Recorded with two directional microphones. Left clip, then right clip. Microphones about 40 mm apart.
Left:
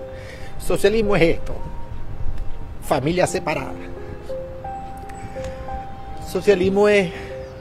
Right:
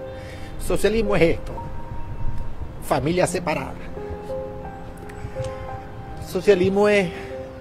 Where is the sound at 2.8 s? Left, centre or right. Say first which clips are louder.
Left 2 dB; left.